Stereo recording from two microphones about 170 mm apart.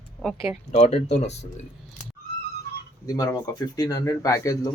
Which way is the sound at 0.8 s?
40° left (ahead or behind).